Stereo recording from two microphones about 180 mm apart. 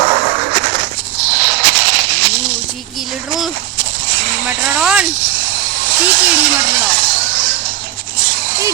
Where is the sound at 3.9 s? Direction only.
90° right.